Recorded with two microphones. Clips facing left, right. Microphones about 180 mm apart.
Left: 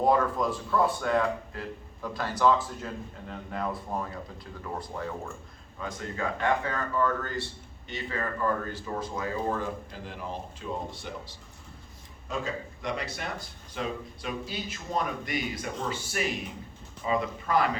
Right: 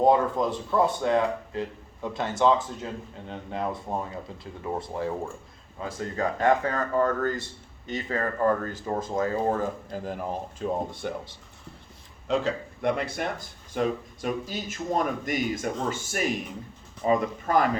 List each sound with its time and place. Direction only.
0.0 s a man's voice: 25° right (ahead or behind); by 11.1 s 50° right (ahead or behind)
12.3 s speech: 75° right (ahead or behind); by 17.7 s 45° right (ahead or behind)